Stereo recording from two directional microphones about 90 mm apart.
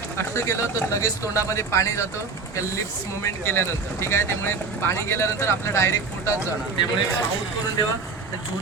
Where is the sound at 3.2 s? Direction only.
25° left (ahead or behind).